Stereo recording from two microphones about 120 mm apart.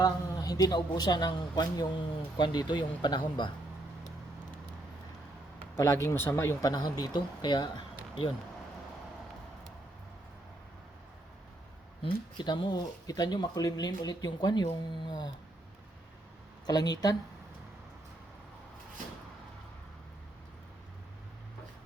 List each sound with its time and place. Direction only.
0.0 s speech: 30° left (ahead or behind)
5.7 s speech: 25° left (ahead or behind); by 8.3 s 40° left (ahead or behind)
12.4 s speech: 40° left (ahead or behind)
16.6 s speech: 35° left (ahead or behind)